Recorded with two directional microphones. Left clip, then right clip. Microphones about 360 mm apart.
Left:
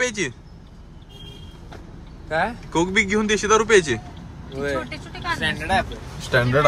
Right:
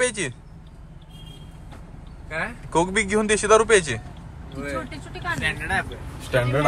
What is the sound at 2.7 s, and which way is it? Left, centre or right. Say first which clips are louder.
Speech: even; centre.